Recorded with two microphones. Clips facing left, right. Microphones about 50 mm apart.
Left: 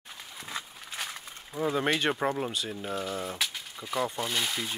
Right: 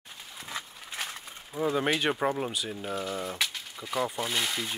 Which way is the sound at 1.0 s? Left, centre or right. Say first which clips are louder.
Even; centre.